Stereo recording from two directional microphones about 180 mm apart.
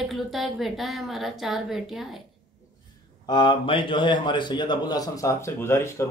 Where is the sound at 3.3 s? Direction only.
25° left (ahead or behind).